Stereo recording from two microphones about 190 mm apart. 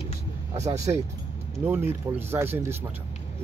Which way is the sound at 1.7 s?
10° right (ahead or behind).